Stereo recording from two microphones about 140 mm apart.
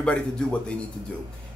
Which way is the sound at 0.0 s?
10° left (ahead or behind).